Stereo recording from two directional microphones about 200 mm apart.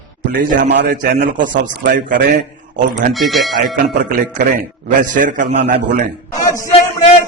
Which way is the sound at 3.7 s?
40° right (ahead or behind).